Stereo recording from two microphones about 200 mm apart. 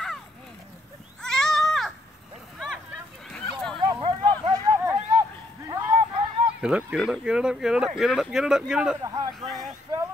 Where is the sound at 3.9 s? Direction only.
25° right (ahead or behind).